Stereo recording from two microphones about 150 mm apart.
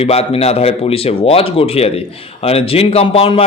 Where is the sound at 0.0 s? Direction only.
40° left (ahead or behind).